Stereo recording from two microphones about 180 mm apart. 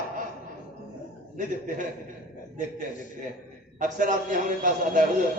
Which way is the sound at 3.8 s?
45° right (ahead or behind).